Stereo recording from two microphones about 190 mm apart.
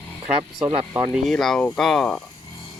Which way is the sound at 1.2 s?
Centre (ahead or behind).